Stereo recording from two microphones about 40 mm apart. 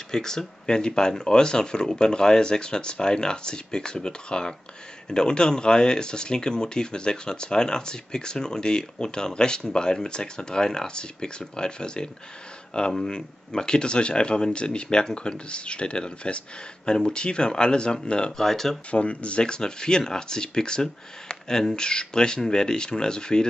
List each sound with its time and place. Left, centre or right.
0.1 s speech: centre
18.4 s speech: centre
18.9 s speech: left